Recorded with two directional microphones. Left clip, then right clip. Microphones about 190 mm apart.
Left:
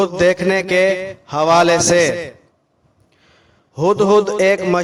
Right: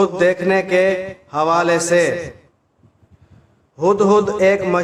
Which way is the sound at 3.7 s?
40° left (ahead or behind).